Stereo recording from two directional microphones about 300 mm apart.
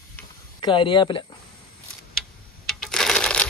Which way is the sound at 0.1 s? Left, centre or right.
Centre.